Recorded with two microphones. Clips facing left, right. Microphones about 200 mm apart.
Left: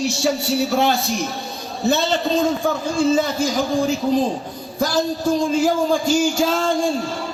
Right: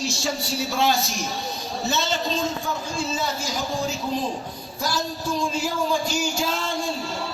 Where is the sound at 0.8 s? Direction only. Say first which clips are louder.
Left 3 dB; 60° left (ahead or behind).